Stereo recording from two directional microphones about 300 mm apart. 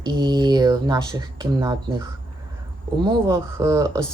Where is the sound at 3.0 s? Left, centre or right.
Centre.